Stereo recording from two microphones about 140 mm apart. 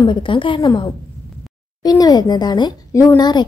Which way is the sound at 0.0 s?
35° left (ahead or behind).